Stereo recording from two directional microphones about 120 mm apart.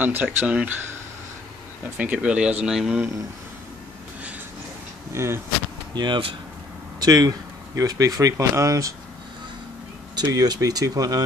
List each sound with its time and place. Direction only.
0.0 s speech: 15° right (ahead or behind)
2.0 s speech: 10° right (ahead or behind)
5.1 s speech: 20° right (ahead or behind)
5.9 s speech: 40° right (ahead or behind)
7.0 s speech: 30° right (ahead or behind)
10.1 s speech: 35° right (ahead or behind)